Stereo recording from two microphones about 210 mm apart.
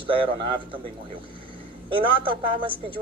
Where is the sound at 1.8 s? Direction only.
25° right (ahead or behind).